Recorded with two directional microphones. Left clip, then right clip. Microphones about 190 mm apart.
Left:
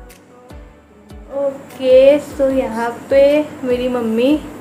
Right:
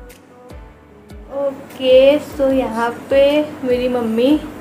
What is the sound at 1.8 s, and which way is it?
A woman's voice, 5° left (ahead or behind).